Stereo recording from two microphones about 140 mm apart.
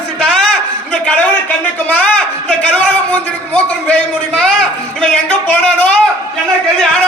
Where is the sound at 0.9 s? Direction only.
10° left (ahead or behind).